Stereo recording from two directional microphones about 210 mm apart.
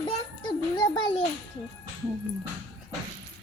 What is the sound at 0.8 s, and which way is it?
Speech, 20° left (ahead or behind).